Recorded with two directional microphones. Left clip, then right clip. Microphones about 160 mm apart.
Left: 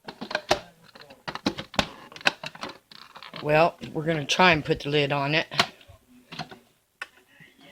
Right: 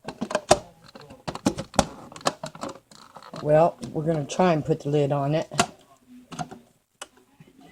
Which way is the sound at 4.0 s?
25° left (ahead or behind).